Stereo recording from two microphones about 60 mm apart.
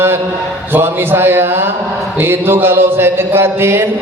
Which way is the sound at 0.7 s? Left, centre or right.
Right.